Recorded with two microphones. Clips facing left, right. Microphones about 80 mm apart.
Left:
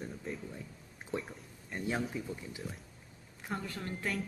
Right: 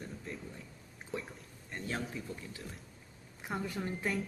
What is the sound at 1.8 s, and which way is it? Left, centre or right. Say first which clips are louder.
Speech: left 4 dB; centre.